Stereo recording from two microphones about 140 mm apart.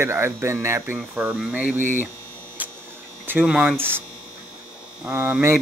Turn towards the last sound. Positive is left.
turn(degrees=-15)  # may be behind; listen again after turning